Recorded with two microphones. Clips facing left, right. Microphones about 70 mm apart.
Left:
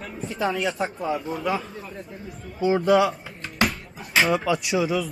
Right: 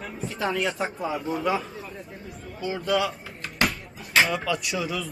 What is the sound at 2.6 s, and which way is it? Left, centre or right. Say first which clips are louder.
Speech: left 9 dB; left.